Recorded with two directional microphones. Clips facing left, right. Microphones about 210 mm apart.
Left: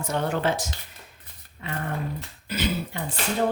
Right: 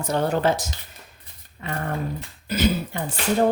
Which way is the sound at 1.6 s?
45° right (ahead or behind).